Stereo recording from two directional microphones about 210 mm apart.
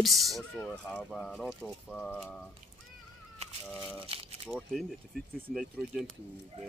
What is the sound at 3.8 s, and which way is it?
Speech, 5° right (ahead or behind).